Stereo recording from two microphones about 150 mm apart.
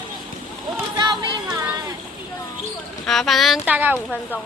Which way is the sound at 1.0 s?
30° right (ahead or behind).